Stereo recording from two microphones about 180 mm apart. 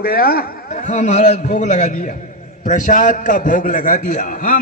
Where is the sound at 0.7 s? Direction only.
45° left (ahead or behind).